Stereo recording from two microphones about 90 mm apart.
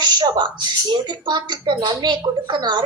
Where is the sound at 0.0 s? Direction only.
55° right (ahead or behind).